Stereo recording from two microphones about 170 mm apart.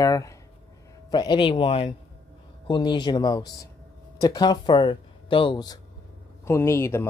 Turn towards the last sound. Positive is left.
turn(degrees=15)  # may be behind; listen again after turning